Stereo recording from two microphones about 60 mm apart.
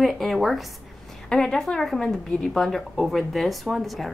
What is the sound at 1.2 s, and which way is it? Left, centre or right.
A woman's voice, centre.